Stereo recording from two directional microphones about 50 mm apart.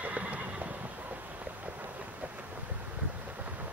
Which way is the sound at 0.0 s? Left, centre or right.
Right.